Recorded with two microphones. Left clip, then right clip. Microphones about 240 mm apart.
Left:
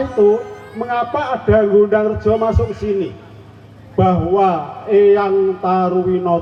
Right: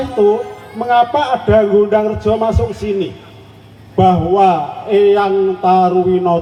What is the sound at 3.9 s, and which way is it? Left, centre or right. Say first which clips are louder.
A man's voice: right 3 dB; right.